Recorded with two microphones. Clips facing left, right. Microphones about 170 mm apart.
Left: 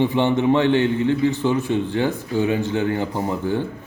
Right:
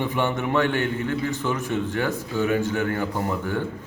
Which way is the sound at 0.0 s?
20° left (ahead or behind).